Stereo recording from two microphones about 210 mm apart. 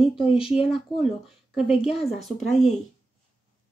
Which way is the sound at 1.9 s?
30° left (ahead or behind).